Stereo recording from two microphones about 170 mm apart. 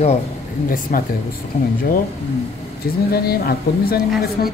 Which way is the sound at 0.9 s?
60° left (ahead or behind).